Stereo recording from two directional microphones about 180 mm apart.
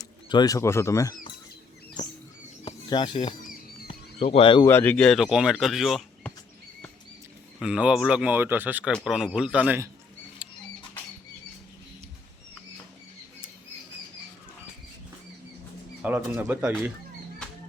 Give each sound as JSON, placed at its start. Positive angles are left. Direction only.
{"t": 0.0, "sound": "speech", "side_deg": 20}
{"t": 2.0, "sound": "bird", "side_deg": 20}
{"t": 2.6, "sound": "speech", "side_deg": 25}
{"t": 3.8, "sound": "a sound", "side_deg": 30}
{"t": 4.7, "sound": "speech", "side_deg": 10}
{"t": 7.6, "sound": "speech", "side_deg": -5}
{"t": 8.9, "sound": "speech", "side_deg": 0}
{"t": 16.0, "sound": "speech", "side_deg": -10}